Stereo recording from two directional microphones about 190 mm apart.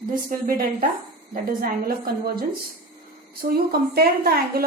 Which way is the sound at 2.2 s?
50° right (ahead or behind).